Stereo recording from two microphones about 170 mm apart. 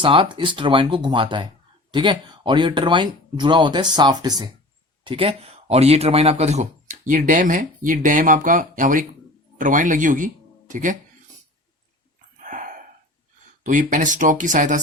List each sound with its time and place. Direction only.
0.0 s speech: 30° right (ahead or behind)
5.0 s speech: 35° right (ahead or behind); by 10.9 s 50° right (ahead or behind)
12.4 s a sound: 50° right (ahead or behind)
13.7 s speech: 50° right (ahead or behind)